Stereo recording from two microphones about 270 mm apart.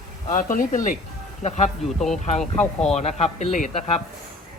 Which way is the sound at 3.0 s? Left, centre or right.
Left.